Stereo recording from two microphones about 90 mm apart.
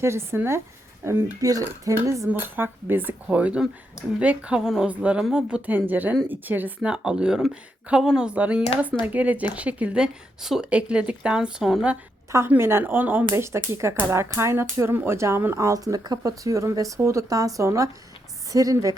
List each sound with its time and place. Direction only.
0.0 s speech: 30° right (ahead or behind)
2.6 s a woman's voice: 25° right (ahead or behind); by 11.9 s 5° right (ahead or behind)
12.5 s speech: 25° right (ahead or behind)